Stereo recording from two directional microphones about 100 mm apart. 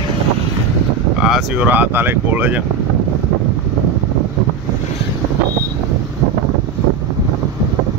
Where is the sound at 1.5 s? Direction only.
20° right (ahead or behind).